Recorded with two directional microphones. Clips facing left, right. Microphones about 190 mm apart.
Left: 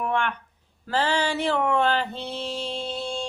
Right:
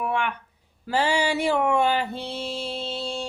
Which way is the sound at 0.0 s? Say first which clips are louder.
Even; 10° right (ahead or behind).